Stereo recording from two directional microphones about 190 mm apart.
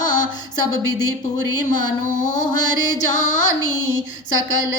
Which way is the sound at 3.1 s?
40° left (ahead or behind).